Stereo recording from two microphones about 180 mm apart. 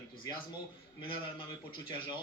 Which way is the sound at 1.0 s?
25° left (ahead or behind).